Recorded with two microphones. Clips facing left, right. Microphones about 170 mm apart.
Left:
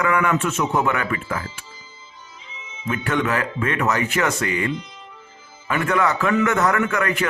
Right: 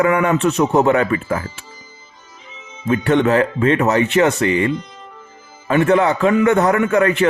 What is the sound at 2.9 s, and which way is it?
A man's voice, 30° right (ahead or behind).